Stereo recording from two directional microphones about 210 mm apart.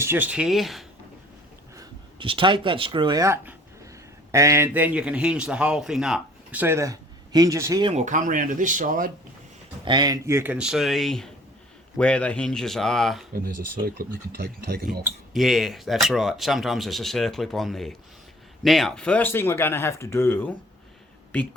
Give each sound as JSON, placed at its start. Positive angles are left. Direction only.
{"t": 0.0, "sound": "speech", "side_deg": -10}
{"t": 1.7, "sound": "speech", "side_deg": -20}
{"t": 7.9, "sound": "speech", "side_deg": -35}
{"t": 9.8, "sound": "speech", "side_deg": -20}
{"t": 13.3, "sound": "speech", "side_deg": -45}
{"t": 15.3, "sound": "speech", "side_deg": 0}